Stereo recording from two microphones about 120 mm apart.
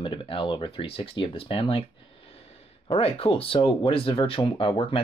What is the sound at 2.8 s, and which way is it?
Speech, 55° left (ahead or behind).